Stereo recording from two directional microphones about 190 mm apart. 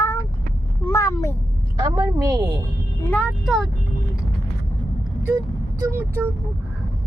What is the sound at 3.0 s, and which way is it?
Speech, 5° left (ahead or behind).